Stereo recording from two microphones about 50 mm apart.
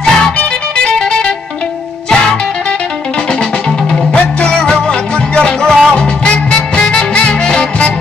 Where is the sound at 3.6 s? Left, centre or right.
Centre.